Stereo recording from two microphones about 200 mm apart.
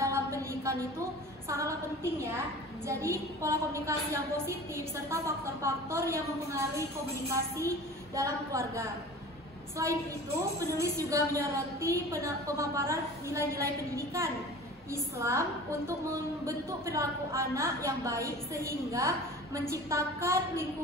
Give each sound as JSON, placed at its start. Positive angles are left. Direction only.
{"t": 0.0, "sound": "a sound", "side_deg": -15}
{"t": 1.5, "sound": "speech", "side_deg": -15}
{"t": 2.9, "sound": "speech", "side_deg": -15}